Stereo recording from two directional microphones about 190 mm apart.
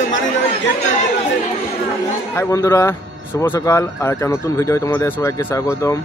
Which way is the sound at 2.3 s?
15° left (ahead or behind).